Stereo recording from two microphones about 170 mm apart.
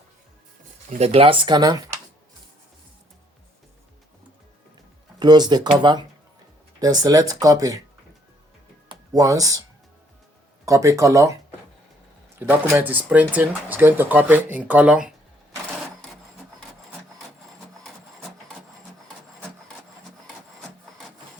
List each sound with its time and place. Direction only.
0.9 s speech: 40° right (ahead or behind); by 2.0 s 20° right (ahead or behind)
5.2 s speech: 25° right (ahead or behind)
8.9 s speech: 20° right (ahead or behind)
10.7 s speech: 20° right (ahead or behind)
12.4 s speech: 10° right (ahead or behind)
18.2 s wood: centre (ahead or behind)